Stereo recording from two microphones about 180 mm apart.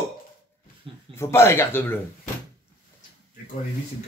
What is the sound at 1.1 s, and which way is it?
Speech, 15° left (ahead or behind).